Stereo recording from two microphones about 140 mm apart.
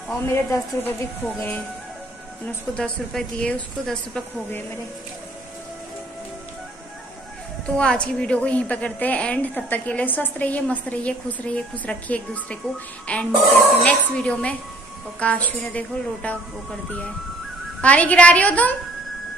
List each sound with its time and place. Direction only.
0.3 s a woman's voice: 20° left (ahead or behind)
7.7 s a woman's voice: 5° left (ahead or behind)
17.8 s a woman's voice: 10° left (ahead or behind)